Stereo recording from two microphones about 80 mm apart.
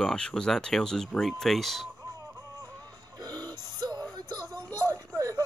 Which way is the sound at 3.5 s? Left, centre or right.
Right.